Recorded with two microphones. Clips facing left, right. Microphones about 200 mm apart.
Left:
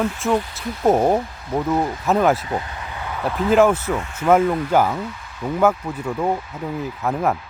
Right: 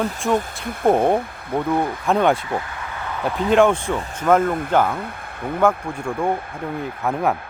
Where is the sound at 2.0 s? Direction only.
5° left (ahead or behind).